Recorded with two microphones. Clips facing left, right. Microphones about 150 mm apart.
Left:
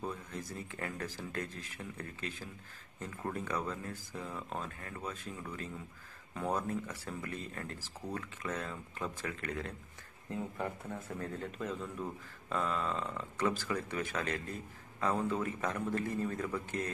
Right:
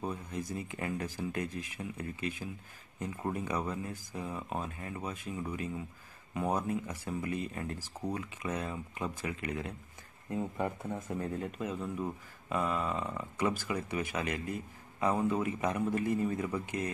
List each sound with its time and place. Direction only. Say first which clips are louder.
0.0 s speech: right 3 dB; 15° right (ahead or behind)